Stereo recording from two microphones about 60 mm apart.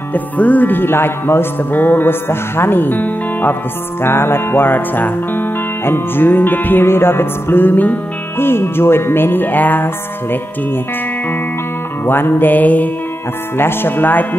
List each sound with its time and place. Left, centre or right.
0.1 s music: left
4.0 s music: left
8.4 s music: left
12.1 s music: left
13.6 s music: left